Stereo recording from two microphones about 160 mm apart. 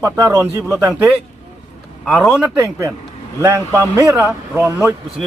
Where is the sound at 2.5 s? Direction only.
20° right (ahead or behind).